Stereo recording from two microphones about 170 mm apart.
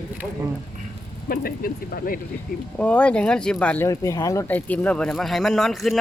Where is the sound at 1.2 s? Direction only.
60° left (ahead or behind).